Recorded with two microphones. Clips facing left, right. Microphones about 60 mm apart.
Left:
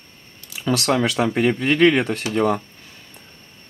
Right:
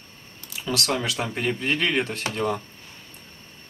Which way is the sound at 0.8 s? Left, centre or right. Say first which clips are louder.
Left 8 dB; left.